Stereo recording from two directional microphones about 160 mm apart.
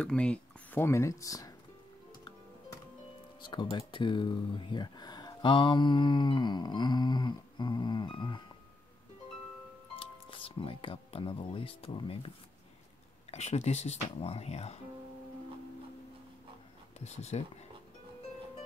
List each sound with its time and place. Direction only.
0.0 s speech: 5° left (ahead or behind)
3.3 s music: 30° left (ahead or behind)
3.7 s speech: 30° left (ahead or behind)
9.9 s speech: 35° left (ahead or behind)
13.3 s speech: 45° left (ahead or behind)
17.0 s speech: 45° left (ahead or behind)